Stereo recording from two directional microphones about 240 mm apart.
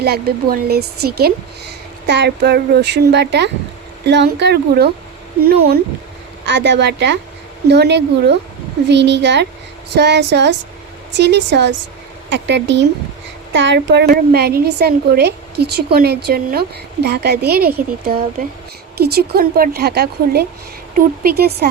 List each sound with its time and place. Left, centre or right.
0.0 s a woman's voice: right
6.4 s a woman's voice: right